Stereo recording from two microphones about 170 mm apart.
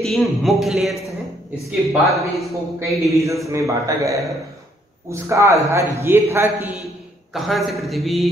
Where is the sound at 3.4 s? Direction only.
20° right (ahead or behind).